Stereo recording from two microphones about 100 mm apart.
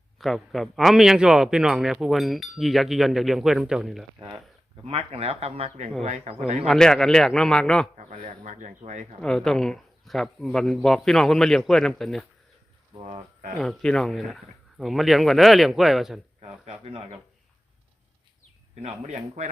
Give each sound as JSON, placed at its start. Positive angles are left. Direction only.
{"t": 0.2, "sound": "a man's voice", "side_deg": 0}
{"t": 4.9, "sound": "speech", "side_deg": -75}
{"t": 6.7, "sound": "a man's voice", "side_deg": 5}
{"t": 9.2, "sound": "a man's voice", "side_deg": 5}
{"t": 13.6, "sound": "a man's voice", "side_deg": 5}
{"t": 16.4, "sound": "speech", "side_deg": -85}